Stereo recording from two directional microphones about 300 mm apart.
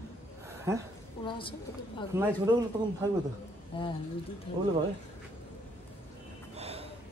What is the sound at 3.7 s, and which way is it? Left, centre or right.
Speech, centre.